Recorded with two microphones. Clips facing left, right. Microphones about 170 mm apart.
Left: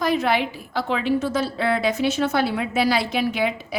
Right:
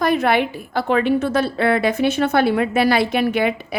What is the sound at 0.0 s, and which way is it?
A woman's voice, 55° right (ahead or behind).